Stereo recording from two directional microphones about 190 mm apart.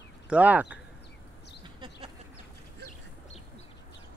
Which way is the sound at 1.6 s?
25° right (ahead or behind).